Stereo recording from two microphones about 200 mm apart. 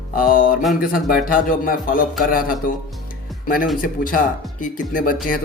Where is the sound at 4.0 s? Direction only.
45° left (ahead or behind).